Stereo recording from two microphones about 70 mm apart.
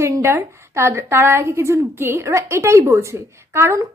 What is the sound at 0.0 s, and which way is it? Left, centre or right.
A woman's voice, right.